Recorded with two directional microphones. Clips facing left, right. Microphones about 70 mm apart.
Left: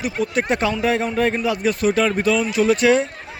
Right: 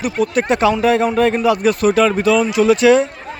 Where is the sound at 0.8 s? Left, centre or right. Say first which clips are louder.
Right 5 dB; right.